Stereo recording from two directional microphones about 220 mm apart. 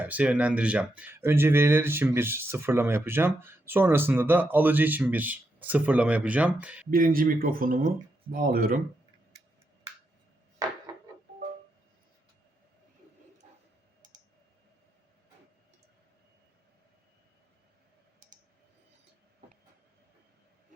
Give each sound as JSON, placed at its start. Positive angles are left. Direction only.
{"t": 0.0, "sound": "speech", "side_deg": -5}
{"t": 6.9, "sound": "speech", "side_deg": -40}